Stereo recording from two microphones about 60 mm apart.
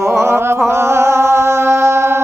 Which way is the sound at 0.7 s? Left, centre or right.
Right.